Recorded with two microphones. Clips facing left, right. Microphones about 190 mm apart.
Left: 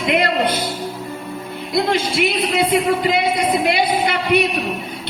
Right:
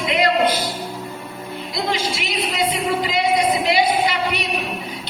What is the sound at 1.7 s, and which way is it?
A man's voice, 55° left (ahead or behind).